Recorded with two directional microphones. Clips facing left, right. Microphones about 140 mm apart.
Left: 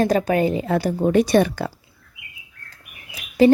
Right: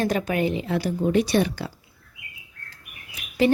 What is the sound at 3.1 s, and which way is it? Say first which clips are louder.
Bird: left 6 dB; 35° left (ahead or behind).